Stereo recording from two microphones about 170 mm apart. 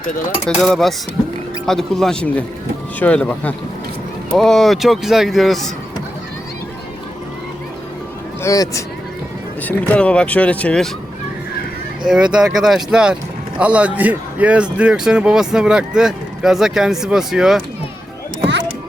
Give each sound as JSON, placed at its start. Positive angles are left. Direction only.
{"t": 0.4, "sound": "a man's voice", "side_deg": 0}
{"t": 8.4, "sound": "speech", "side_deg": 20}
{"t": 9.6, "sound": "speech", "side_deg": 5}
{"t": 12.0, "sound": "a man's voice", "side_deg": -5}